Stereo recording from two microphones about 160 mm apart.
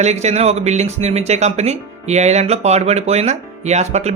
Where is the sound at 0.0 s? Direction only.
45° right (ahead or behind).